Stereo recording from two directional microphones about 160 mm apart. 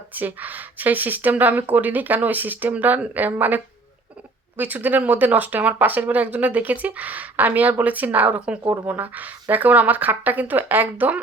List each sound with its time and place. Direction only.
0.1 s speech: 10° right (ahead or behind)